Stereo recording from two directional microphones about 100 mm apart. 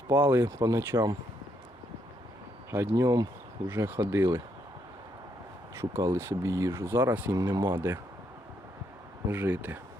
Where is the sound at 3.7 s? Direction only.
20° right (ahead or behind).